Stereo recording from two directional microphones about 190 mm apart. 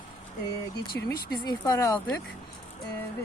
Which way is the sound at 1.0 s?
20° left (ahead or behind).